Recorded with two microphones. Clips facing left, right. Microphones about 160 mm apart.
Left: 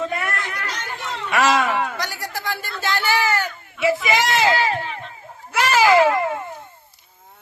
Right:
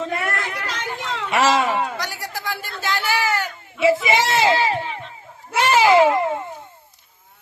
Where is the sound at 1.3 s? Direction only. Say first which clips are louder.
Even; 25° right (ahead or behind).